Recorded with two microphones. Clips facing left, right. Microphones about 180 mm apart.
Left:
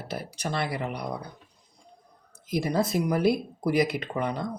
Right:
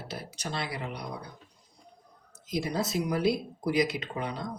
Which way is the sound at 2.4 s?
55° left (ahead or behind).